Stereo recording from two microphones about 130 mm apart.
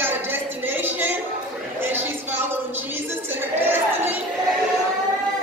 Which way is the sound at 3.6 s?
15° right (ahead or behind).